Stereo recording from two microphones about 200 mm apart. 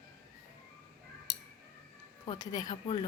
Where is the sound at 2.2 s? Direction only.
25° left (ahead or behind).